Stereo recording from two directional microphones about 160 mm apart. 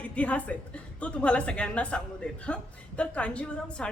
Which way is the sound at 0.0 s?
10° left (ahead or behind).